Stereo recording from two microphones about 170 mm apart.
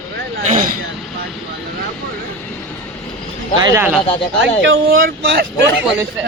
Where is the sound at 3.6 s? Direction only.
20° right (ahead or behind).